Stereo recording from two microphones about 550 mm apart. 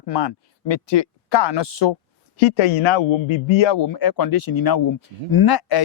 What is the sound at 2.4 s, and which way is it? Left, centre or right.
A man's voice, left.